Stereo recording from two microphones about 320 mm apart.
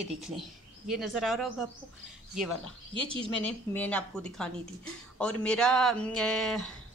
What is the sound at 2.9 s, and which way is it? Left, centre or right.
Speech, centre.